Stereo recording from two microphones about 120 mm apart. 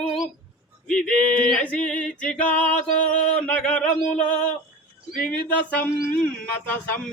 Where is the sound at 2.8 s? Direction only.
90° left.